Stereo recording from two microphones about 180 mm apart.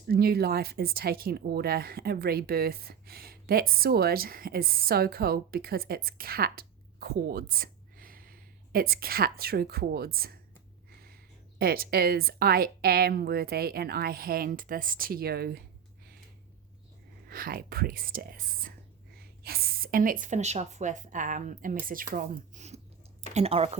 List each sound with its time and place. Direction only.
0.1 s speech: 60° right (ahead or behind)
11.6 s speech: 55° right (ahead or behind)
17.2 s speech: 55° right (ahead or behind); by 23.7 s 35° right (ahead or behind)